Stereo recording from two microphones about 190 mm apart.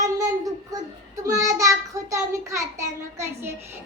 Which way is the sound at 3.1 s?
15° right (ahead or behind).